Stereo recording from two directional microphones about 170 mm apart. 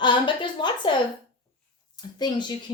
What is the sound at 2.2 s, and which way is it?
Speech, 25° left (ahead or behind).